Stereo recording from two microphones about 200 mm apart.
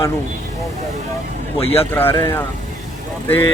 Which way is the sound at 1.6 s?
30° left (ahead or behind).